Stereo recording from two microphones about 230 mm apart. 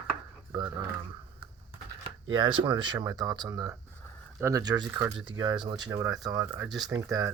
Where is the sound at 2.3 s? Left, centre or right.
Right.